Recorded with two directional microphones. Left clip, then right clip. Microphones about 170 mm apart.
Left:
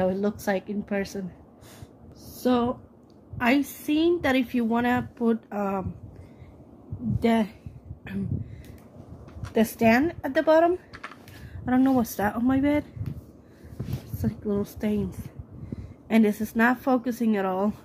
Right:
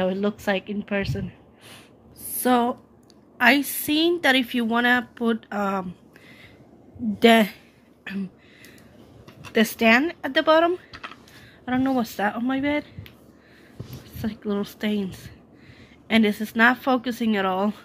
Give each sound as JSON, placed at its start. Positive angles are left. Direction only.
{"t": 0.0, "sound": "a woman's voice", "side_deg": 0}
{"t": 2.3, "sound": "a woman's voice", "side_deg": -10}
{"t": 7.2, "sound": "a woman's voice", "side_deg": -45}
{"t": 8.0, "sound": "a sound", "side_deg": 5}
{"t": 9.5, "sound": "a woman's voice", "side_deg": -5}
{"t": 11.9, "sound": "speech", "side_deg": 10}
{"t": 14.2, "sound": "a woman's voice", "side_deg": 0}